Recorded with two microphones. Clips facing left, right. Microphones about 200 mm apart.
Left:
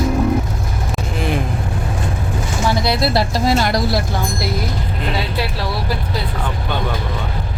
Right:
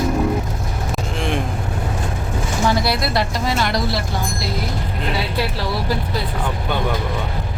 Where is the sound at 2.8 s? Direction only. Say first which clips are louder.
Left 3 dB; 30° left (ahead or behind).